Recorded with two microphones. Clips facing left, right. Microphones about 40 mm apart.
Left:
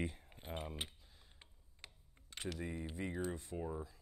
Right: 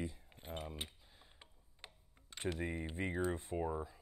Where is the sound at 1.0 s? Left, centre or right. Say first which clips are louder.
Right 2 dB; centre.